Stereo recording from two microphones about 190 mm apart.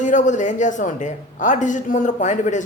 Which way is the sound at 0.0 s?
40° left (ahead or behind).